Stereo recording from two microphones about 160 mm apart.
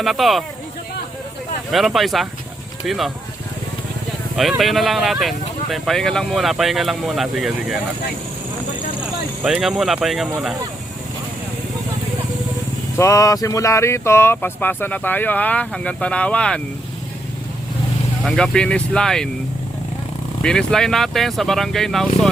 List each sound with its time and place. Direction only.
0.0 s speech: centre (ahead or behind)
1.7 s speech: centre (ahead or behind)
4.4 s speech: centre (ahead or behind)
9.4 s speech: centre (ahead or behind)
13.0 s speech: 20° left (ahead or behind)
18.3 s speech: 5° left (ahead or behind)
20.4 s speech: 5° left (ahead or behind)